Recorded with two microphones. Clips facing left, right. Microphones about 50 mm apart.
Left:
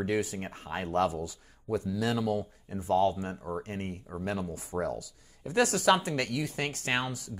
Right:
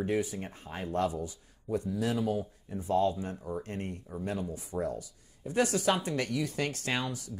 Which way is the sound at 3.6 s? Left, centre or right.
Left.